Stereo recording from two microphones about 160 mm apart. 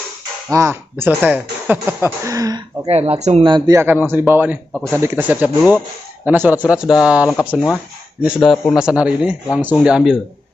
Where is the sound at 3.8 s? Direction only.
15° right (ahead or behind).